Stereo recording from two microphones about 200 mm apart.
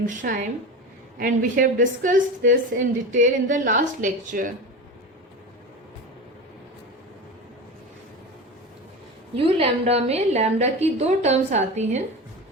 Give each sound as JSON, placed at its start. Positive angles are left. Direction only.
{"t": 0.0, "sound": "a woman's voice", "side_deg": -40}
{"t": 9.3, "sound": "a woman's voice", "side_deg": -30}